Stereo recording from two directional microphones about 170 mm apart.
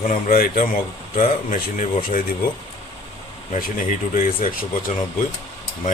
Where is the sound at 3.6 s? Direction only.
50° left (ahead or behind).